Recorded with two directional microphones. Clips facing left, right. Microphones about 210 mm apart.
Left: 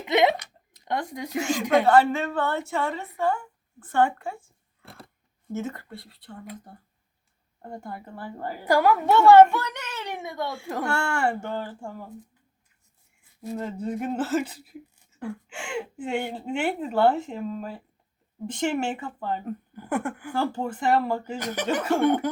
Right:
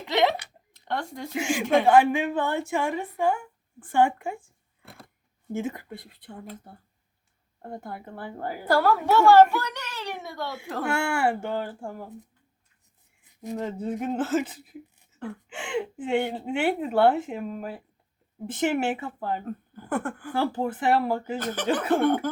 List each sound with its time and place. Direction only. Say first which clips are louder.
0.0 s a sound: left 2 dB; 20° left (ahead or behind)
0.9 s speech: left 2 dB; 15° left (ahead or behind)
1.4 s a woman's voice: left 1 dB; 10° right (ahead or behind)
5.5 s a woman's voice: right 1 dB; 10° right (ahead or behind)
7.6 s speech: even; centre (ahead or behind)
8.6 s a child's voice: left 2 dB; 15° left (ahead or behind)
10.9 s a woman's voice: right 2 dB; 10° right (ahead or behind)
13.3 s a sound: even; 15° right (ahead or behind)
13.6 s speech: even; centre (ahead or behind)
15.6 s speech: right 2 dB; centre (ahead or behind)
19.7 s speech: left 1 dB; 10° left (ahead or behind)
20.3 s speech: right 2 dB; 5° right (ahead or behind)
21.3 s speech: even; 10° left (ahead or behind)
21.7 s speech: right 1 dB; 5° right (ahead or behind)